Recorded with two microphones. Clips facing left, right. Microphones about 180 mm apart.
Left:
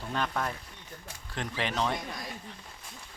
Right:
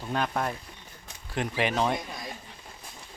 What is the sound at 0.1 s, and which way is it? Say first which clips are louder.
Speech: right 3 dB; 15° right (ahead or behind).